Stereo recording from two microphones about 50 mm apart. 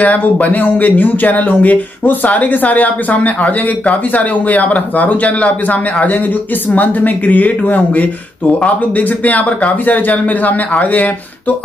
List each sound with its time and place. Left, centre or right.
0.0 s speech: left